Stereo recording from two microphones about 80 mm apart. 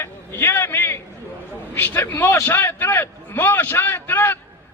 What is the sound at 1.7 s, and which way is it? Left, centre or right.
A man's voice, left.